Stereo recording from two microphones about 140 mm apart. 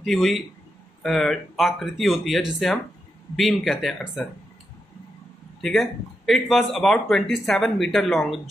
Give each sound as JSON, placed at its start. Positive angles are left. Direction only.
{"t": 0.0, "sound": "speech", "side_deg": 0}
{"t": 5.6, "sound": "speech", "side_deg": 0}